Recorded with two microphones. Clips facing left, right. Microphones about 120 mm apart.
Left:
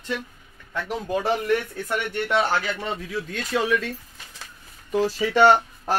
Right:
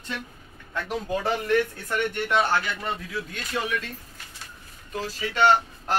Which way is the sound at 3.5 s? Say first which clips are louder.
Left 5 dB; 90° left.